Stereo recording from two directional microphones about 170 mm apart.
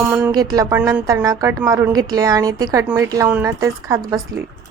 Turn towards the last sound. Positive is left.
turn(degrees=-20)  # may be behind; listen again after turning